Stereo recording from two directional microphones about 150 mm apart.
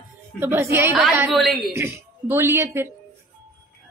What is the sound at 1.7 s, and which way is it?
A woman's voice, 15° right (ahead or behind).